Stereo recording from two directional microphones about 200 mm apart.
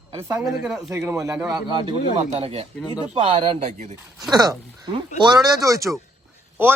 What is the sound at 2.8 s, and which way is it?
Speech, 20° left (ahead or behind).